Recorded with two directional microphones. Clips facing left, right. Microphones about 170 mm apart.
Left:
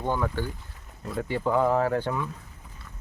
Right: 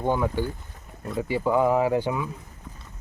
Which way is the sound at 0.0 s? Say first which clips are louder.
Right 3 dB; 15° right (ahead or behind).